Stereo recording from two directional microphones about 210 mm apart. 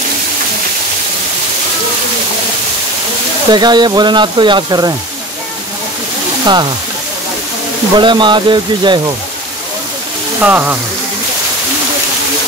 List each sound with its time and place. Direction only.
3.5 s speech: 20° right (ahead or behind)
6.4 s speech: 20° right (ahead or behind)
7.9 s speech: 20° right (ahead or behind)
10.4 s speech: 10° right (ahead or behind)